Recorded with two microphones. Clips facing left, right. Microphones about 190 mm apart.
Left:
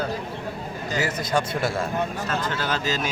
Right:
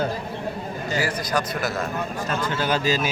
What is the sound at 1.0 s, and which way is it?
Speech, 25° left (ahead or behind).